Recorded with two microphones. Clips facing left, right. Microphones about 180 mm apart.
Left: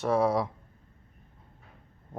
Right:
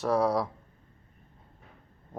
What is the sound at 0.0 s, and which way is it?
Speech, centre (ahead or behind).